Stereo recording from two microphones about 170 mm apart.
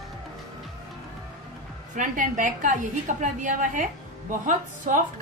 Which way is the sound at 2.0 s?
50° right (ahead or behind).